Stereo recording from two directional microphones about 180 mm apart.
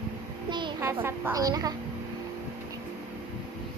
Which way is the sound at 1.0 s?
15° right (ahead or behind).